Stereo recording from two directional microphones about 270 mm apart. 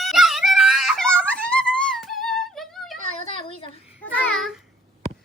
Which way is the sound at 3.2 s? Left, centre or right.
Centre.